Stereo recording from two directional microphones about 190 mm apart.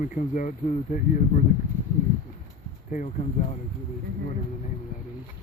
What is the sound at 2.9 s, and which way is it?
Speech, 40° left (ahead or behind).